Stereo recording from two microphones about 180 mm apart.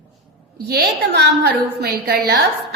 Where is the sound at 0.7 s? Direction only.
65° right (ahead or behind).